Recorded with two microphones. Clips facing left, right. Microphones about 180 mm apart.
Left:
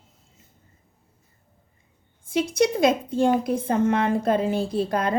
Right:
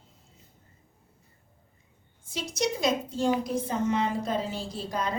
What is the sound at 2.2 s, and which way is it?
A woman's voice, 55° left (ahead or behind).